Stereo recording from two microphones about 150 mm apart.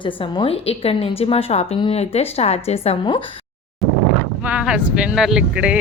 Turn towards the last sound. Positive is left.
turn(degrees=-5)  # may be behind; listen again after turning